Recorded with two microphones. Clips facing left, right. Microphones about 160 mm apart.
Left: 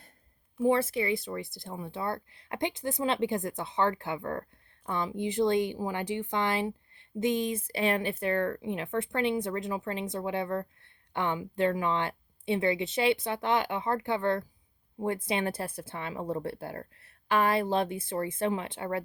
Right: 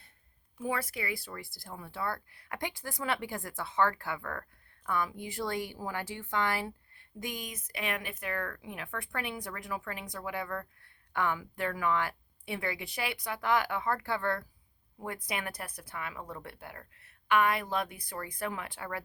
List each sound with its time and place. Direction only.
0.6 s a woman's voice: 25° left (ahead or behind)